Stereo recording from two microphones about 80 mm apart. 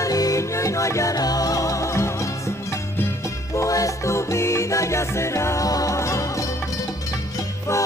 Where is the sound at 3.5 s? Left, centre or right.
Left.